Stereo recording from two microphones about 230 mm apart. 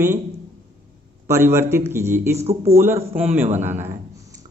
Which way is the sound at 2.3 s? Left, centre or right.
Right.